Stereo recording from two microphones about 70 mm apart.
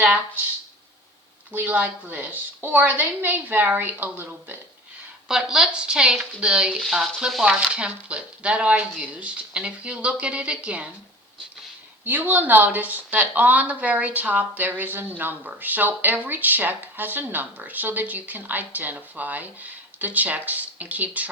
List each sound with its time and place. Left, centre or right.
0.0 s speech: right
1.5 s speech: right
5.3 s speech: centre
12.0 s speech: right